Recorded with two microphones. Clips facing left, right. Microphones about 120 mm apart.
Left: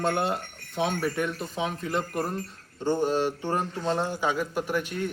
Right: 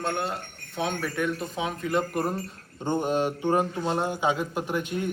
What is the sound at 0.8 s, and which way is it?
Speech, 5° left (ahead or behind).